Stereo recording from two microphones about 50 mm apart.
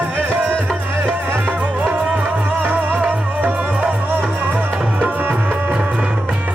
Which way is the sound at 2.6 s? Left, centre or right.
Right.